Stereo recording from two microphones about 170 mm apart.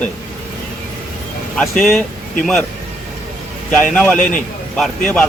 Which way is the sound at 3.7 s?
5° left (ahead or behind).